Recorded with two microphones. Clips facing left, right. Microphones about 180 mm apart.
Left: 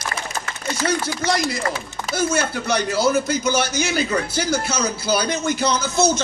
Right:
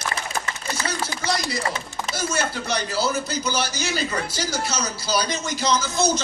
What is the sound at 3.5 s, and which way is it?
A man's voice, 55° left (ahead or behind).